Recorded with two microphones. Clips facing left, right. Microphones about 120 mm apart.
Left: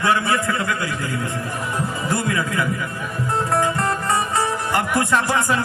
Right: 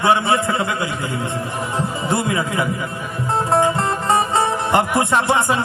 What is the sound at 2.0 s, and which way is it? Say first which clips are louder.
A man's voice: right 2 dB; 25° right (ahead or behind).